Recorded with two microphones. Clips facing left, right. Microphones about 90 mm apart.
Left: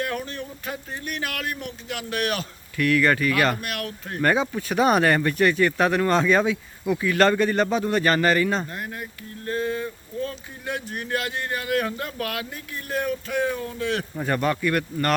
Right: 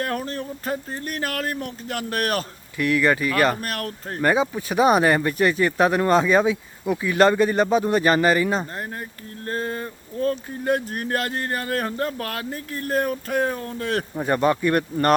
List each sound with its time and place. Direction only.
0.0 s speech: 40° right (ahead or behind)
2.7 s speech: 20° right (ahead or behind)
3.6 s speech: 40° right (ahead or behind)
4.2 s speech: 15° right (ahead or behind)
8.7 s speech: 35° right (ahead or behind)
14.2 s speech: 20° right (ahead or behind)